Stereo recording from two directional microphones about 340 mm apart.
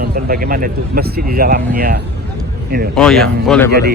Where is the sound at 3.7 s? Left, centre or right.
Right.